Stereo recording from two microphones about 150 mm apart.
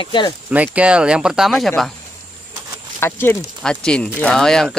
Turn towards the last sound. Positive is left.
turn(degrees=5)  # may be behind; listen again after turning